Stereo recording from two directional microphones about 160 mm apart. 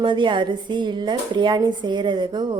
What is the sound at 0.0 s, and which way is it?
A woman's voice, 30° right (ahead or behind).